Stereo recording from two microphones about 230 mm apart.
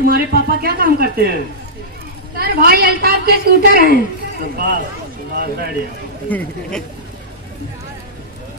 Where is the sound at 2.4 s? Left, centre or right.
Right.